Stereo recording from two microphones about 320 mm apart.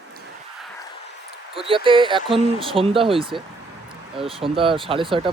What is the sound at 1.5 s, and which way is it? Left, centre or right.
Speech, centre.